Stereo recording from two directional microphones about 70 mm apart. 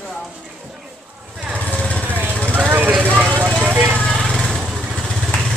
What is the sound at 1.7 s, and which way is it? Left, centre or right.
Vehicle, centre.